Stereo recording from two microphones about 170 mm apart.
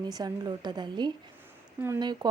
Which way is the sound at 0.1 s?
25° right (ahead or behind).